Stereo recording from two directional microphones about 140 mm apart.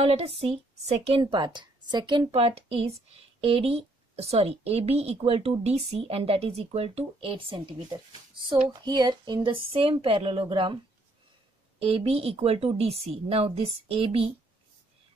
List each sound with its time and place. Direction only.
0.0 s speech: 45° right (ahead or behind)
1.2 s speech: 30° right (ahead or behind)
11.8 s speech: 45° right (ahead or behind)